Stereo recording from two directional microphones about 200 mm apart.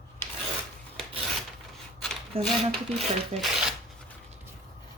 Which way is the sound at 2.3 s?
30° right (ahead or behind).